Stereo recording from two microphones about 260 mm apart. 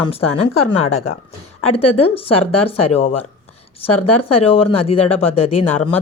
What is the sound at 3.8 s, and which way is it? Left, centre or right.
Speech, left.